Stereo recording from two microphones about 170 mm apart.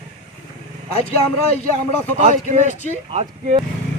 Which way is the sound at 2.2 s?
45° right (ahead or behind).